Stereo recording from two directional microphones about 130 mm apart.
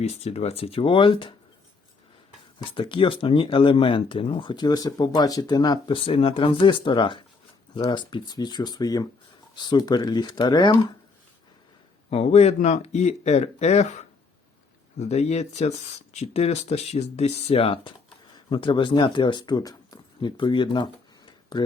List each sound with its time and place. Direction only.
0.0 s speech: 55° left (ahead or behind); by 1.3 s 40° left (ahead or behind)
2.6 s speech: 40° left (ahead or behind)
6.1 s speech: 45° left (ahead or behind)
12.1 s speech: 55° left (ahead or behind); by 21.6 s 35° left (ahead or behind)